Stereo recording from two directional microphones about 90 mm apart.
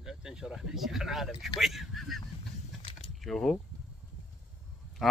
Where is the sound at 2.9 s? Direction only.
90° left.